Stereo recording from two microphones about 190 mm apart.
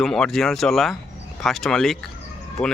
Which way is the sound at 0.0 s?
Centre (ahead or behind).